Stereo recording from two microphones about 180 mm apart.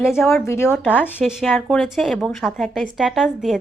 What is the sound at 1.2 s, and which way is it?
A woman's voice, centre (ahead or behind).